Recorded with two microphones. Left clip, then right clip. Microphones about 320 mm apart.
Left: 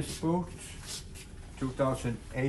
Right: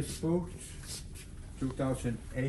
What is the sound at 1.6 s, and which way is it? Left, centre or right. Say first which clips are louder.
Speech: left 4 dB; centre.